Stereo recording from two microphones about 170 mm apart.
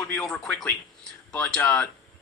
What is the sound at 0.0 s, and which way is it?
Speech, 5° left (ahead or behind).